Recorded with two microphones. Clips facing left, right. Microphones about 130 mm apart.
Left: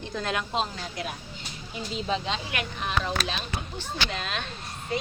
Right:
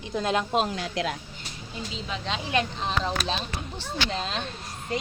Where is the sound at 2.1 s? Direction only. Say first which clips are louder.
Left 8 dB; 30° left (ahead or behind).